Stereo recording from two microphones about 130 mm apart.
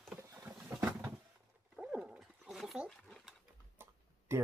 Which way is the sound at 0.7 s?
20° right (ahead or behind).